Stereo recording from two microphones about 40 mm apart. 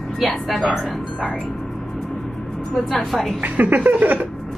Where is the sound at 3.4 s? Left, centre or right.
Right.